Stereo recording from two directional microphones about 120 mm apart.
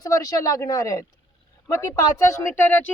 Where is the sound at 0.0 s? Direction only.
30° left (ahead or behind).